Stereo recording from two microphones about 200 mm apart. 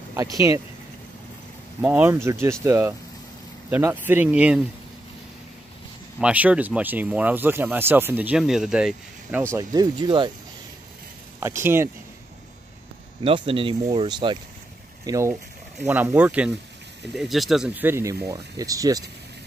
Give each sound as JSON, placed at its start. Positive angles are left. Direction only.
{"t": 0.1, "sound": "speech", "side_deg": -15}
{"t": 1.8, "sound": "speech", "side_deg": -10}
{"t": 6.1, "sound": "speech", "side_deg": -5}
{"t": 9.5, "sound": "speech", "side_deg": -15}
{"t": 11.3, "sound": "speech", "side_deg": -15}
{"t": 13.2, "sound": "speech", "side_deg": -25}